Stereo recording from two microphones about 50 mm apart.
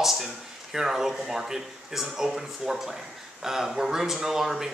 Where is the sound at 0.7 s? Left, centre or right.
Centre.